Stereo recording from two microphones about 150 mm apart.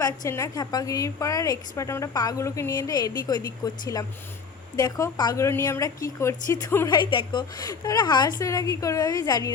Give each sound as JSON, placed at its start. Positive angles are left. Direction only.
{"t": 0.0, "sound": "a woman's voice", "side_deg": 20}
{"t": 6.8, "sound": "a woman's voice", "side_deg": 30}